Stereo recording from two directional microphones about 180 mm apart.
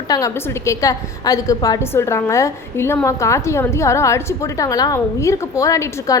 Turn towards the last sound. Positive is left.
turn(degrees=20)  # may be behind; listen again after turning